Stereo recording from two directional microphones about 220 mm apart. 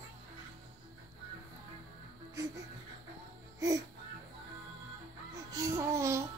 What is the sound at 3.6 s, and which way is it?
Music, 15° right (ahead or behind).